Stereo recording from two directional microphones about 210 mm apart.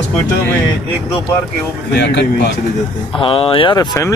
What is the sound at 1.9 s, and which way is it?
Speech, 55° left (ahead or behind).